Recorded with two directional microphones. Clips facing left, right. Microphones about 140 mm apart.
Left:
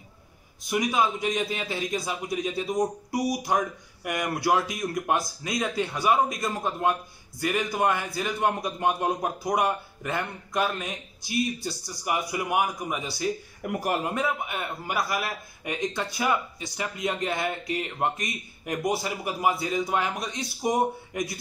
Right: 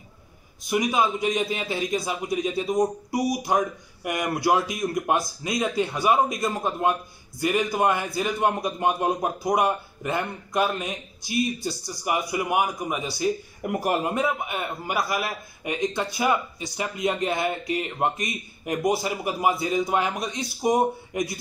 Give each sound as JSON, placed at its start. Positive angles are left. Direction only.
{"t": 0.7, "sound": "a man's voice", "side_deg": -10}
{"t": 13.6, "sound": "speech", "side_deg": -20}
{"t": 14.5, "sound": "a man's voice", "side_deg": -10}